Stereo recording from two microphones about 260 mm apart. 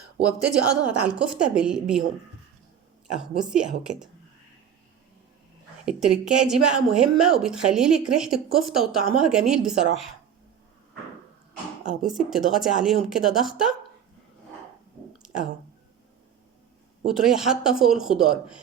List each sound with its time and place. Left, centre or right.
0.3 s speech: centre
3.2 s speech: centre
5.8 s speech: centre
12.1 s speech: centre
15.2 s a sound: centre
17.1 s speech: centre